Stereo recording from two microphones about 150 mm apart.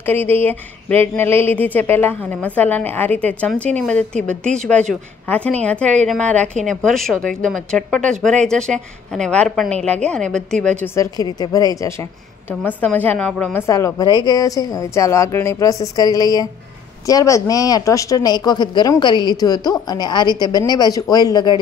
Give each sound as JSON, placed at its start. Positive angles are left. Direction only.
{"t": 0.0, "sound": "a woman's voice", "side_deg": 10}
{"t": 11.0, "sound": "a woman's voice", "side_deg": 25}